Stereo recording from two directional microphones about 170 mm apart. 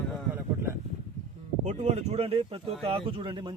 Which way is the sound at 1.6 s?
40° right (ahead or behind).